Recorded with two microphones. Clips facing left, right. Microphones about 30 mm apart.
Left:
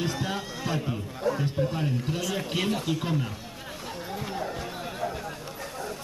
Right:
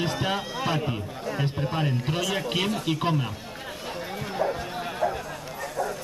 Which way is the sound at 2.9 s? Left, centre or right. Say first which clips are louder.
Right 3 dB; right.